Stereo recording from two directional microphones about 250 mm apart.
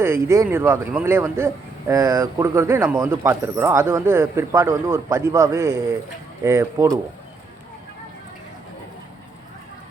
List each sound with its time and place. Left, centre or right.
0.0 s speech: centre